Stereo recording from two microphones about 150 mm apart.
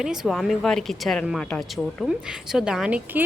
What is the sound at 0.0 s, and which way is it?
Speech, 5° right (ahead or behind).